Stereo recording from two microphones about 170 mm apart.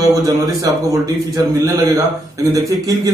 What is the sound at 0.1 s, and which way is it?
A man's voice, 20° right (ahead or behind).